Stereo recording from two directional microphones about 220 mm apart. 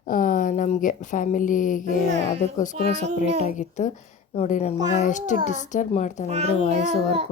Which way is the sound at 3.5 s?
30° left (ahead or behind).